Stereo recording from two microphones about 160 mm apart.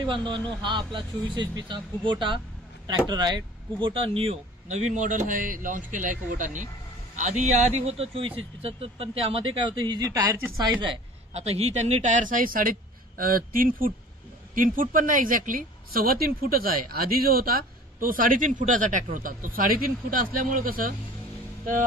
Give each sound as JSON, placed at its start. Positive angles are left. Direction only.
{"t": 0.0, "sound": "a man's voice", "side_deg": -30}
{"t": 10.6, "sound": "a woman's voice", "side_deg": -30}